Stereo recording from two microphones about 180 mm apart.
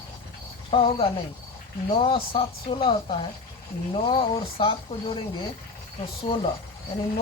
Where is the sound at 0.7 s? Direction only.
30° left (ahead or behind).